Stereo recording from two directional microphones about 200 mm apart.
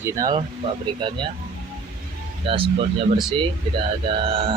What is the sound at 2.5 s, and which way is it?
Speech, 25° right (ahead or behind).